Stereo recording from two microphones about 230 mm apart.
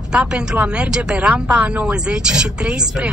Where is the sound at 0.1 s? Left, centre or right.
Centre.